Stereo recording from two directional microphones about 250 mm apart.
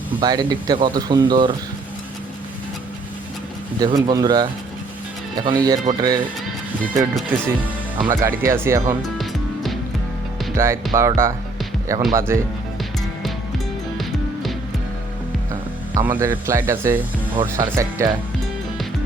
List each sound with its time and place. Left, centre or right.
0.2 s speech: centre
3.8 s speech: centre
7.3 s speech: centre
10.5 s speech: centre
12.0 s speech: centre
16.0 s speech: centre